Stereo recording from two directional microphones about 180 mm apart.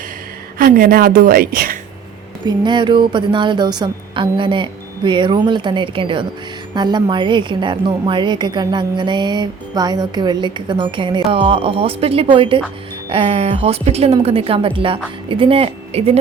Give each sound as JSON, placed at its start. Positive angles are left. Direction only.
{"t": 0.6, "sound": "a woman's voice", "side_deg": -55}
{"t": 2.5, "sound": "a woman's voice", "side_deg": -25}